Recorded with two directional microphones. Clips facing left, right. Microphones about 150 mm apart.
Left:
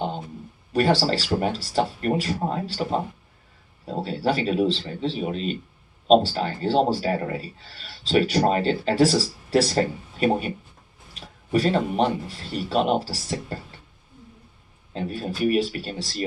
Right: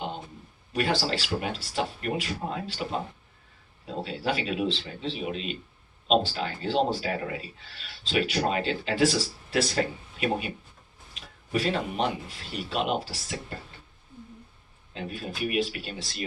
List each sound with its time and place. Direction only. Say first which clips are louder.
0.7 s a man's voice: left 6 dB; 40° left (ahead or behind)
14.9 s a man's voice: left 6 dB; 40° left (ahead or behind)